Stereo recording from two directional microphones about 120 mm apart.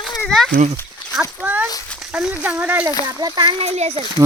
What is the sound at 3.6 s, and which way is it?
Speech, 65° right (ahead or behind).